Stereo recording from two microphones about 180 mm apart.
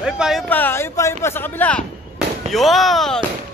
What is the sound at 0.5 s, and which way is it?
Speech, 10° left (ahead or behind).